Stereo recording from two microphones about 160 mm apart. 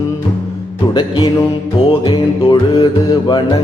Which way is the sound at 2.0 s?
30° left (ahead or behind).